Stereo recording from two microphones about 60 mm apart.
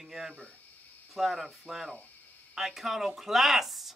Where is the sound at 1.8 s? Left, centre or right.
Left.